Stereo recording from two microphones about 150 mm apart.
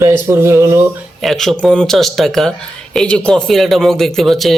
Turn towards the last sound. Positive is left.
turn(degrees=0)  # may be behind; listen again after turning